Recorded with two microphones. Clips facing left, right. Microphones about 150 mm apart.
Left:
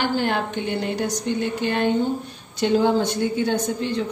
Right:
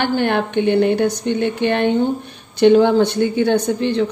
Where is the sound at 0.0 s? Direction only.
65° right (ahead or behind).